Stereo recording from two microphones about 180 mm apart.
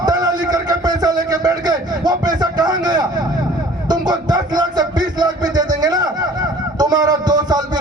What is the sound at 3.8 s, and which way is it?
Music, 25° right (ahead or behind).